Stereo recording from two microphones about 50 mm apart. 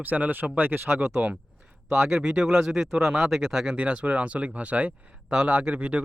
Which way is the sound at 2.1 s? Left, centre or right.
Centre.